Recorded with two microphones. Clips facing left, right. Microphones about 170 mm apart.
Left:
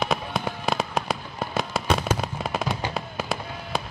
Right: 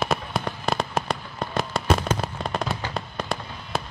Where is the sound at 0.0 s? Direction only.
Centre (ahead or behind).